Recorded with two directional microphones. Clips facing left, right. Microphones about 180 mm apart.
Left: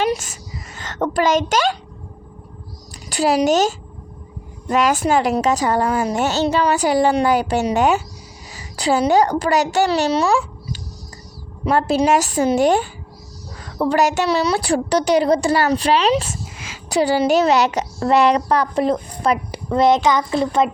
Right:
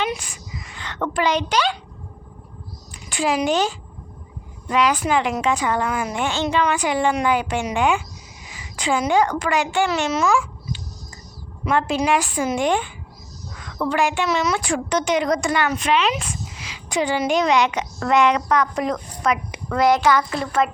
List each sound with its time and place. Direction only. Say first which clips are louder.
0.0 s a woman's voice: left 5 dB; 45° left (ahead or behind)
3.1 s a woman's voice: left 4 dB; 40° left (ahead or behind)
13.6 s a sound: left 5 dB; 35° left (ahead or behind)
13.8 s a woman's voice: left 4 dB; 40° left (ahead or behind)
16.6 s a woman's voice: left 5 dB; 45° left (ahead or behind); by 20.6 s 20° left (ahead or behind)